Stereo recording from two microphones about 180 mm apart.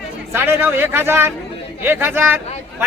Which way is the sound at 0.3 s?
10° right (ahead or behind).